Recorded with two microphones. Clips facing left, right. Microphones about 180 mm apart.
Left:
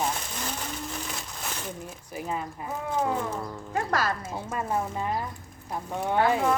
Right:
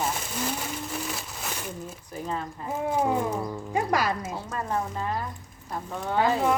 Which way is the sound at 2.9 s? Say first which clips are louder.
Right 2 dB; 15° right (ahead or behind).